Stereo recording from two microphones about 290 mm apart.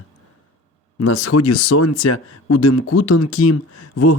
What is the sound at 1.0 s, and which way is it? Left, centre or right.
Speech, left.